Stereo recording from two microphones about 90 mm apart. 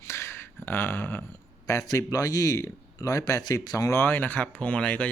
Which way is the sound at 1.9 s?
45° left (ahead or behind).